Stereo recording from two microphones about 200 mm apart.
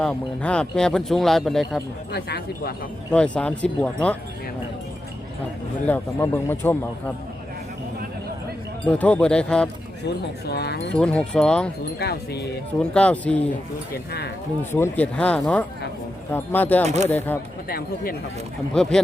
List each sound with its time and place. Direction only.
0.0 s speech: 5° left (ahead or behind)
2.1 s speech: 55° left (ahead or behind)
3.1 s speech: 5° left (ahead or behind)
5.8 s speech: 10° left (ahead or behind)
8.9 s speech: 5° left (ahead or behind)
10.4 s speech: 55° left (ahead or behind)
10.9 s speech: 5° left (ahead or behind)
11.9 s speech: 55° left (ahead or behind)
12.9 s speech: 5° left (ahead or behind)
14.6 s speech: 10° left (ahead or behind)
16.8 s speech: 35° right (ahead or behind)
17.7 s speech: 50° left (ahead or behind)
18.7 s speech: 5° left (ahead or behind)